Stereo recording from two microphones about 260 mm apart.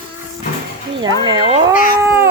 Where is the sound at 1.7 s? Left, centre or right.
Left.